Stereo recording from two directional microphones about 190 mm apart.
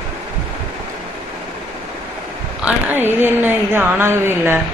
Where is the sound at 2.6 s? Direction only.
5° right (ahead or behind).